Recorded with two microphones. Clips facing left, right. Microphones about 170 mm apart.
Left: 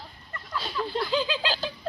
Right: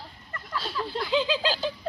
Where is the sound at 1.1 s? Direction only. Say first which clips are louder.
Right 3 dB; 25° right (ahead or behind).